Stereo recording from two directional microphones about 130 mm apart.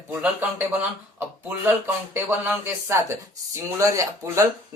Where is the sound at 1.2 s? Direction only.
15° right (ahead or behind).